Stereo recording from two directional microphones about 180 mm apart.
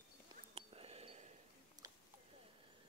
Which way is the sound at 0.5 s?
35° right (ahead or behind).